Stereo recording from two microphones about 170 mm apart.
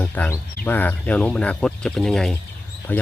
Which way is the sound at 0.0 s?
10° left (ahead or behind).